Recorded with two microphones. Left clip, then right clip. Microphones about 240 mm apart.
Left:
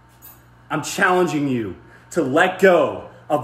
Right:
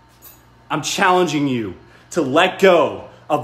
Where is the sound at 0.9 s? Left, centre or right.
Centre.